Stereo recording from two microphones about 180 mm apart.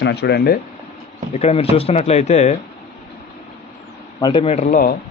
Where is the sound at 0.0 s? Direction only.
65° left (ahead or behind).